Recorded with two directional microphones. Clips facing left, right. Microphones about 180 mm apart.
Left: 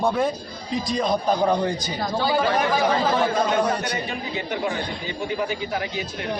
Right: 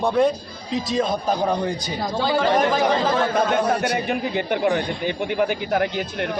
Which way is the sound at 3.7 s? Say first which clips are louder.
Right 5 dB; 55° right (ahead or behind).